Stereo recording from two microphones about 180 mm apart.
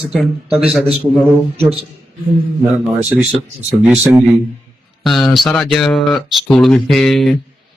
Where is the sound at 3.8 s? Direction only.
5° right (ahead or behind).